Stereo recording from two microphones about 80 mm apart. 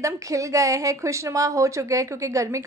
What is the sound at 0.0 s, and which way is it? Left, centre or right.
Speech, right.